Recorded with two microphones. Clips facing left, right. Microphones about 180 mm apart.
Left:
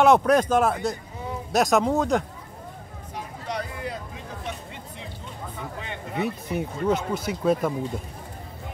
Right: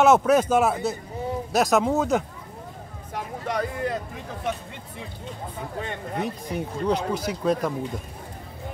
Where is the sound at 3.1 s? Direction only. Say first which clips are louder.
Right 4 dB; 55° right (ahead or behind).